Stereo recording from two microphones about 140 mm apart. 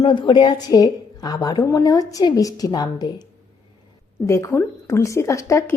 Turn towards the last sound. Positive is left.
turn(degrees=20)  # may be behind; listen again after turning